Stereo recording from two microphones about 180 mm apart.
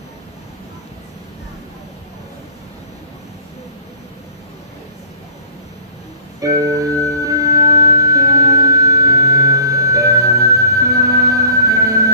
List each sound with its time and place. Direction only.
6.4 s music: 20° right (ahead or behind)